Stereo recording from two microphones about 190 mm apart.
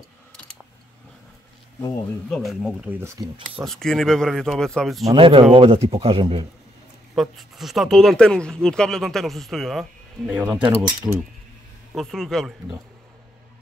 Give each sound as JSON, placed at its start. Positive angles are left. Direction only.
{"t": 2.2, "sound": "a man's voice", "side_deg": 5}
{"t": 3.6, "sound": "a man's voice", "side_deg": 0}
{"t": 5.0, "sound": "a man's voice", "side_deg": -25}
{"t": 7.2, "sound": "a man's voice", "side_deg": 0}
{"t": 10.3, "sound": "speech", "side_deg": -15}
{"t": 11.9, "sound": "a man's voice", "side_deg": 0}